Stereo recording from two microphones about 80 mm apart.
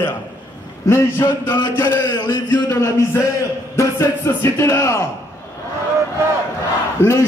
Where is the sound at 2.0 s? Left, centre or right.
Left.